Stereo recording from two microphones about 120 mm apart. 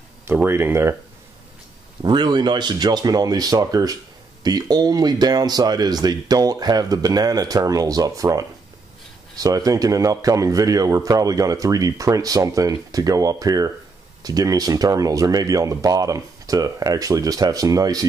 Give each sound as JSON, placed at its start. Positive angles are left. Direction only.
{"t": 0.2, "sound": "a man's voice", "side_deg": -20}
{"t": 2.0, "sound": "a man's voice", "side_deg": -40}